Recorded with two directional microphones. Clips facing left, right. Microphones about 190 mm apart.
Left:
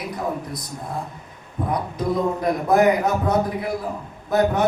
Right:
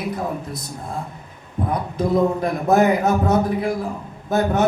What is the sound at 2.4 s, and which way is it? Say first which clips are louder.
Speech: even; 25° right (ahead or behind).